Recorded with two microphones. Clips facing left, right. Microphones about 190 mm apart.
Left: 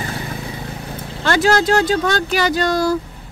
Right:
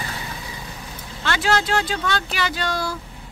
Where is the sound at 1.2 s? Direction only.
40° left (ahead or behind).